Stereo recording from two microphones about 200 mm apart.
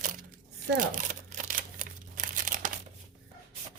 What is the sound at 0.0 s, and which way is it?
Crumpling, 40° right (ahead or behind).